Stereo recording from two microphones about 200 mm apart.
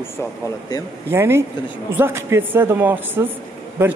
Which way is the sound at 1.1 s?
10° right (ahead or behind).